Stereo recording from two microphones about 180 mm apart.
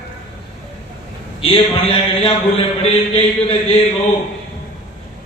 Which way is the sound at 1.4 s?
30° left (ahead or behind).